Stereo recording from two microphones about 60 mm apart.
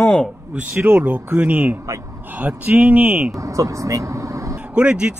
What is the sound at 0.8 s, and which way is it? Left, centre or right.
Speech, right.